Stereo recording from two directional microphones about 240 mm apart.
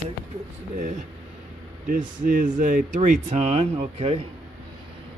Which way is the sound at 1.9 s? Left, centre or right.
Right.